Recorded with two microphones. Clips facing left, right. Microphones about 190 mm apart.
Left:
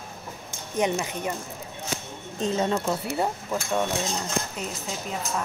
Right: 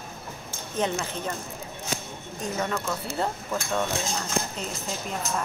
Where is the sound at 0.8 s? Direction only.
15° left (ahead or behind).